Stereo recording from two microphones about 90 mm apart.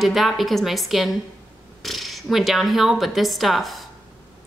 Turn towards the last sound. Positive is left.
turn(degrees=0)  # may be behind; listen again after turning